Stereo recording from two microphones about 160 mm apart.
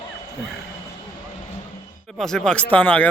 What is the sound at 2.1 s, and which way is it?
Speech, 5° left (ahead or behind).